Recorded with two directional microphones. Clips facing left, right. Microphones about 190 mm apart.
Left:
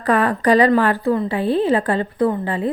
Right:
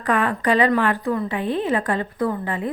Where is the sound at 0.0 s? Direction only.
35° left (ahead or behind).